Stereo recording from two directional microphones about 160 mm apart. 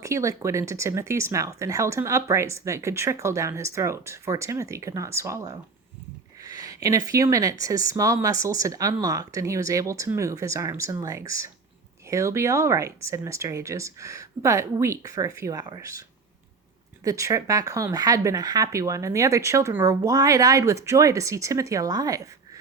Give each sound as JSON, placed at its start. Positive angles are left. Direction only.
{"t": 0.0, "sound": "speech", "side_deg": -20}